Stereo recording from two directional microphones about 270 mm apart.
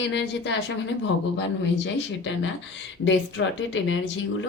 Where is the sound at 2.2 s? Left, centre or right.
Left.